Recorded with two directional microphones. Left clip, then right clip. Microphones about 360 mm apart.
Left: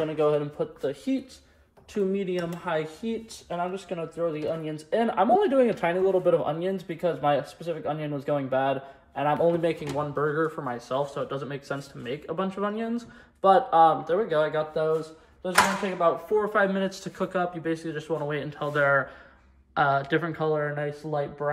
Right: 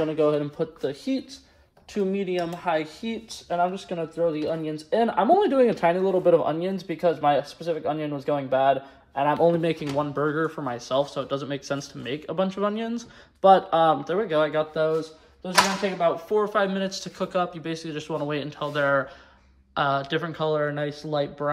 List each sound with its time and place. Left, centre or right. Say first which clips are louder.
0.0 s speech: right 2 dB; right
3.4 s speech: right 6 dB; right
16.3 s speech: right 1 dB; centre